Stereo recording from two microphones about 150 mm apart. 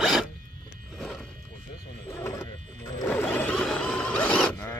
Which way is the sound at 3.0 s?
10° left (ahead or behind).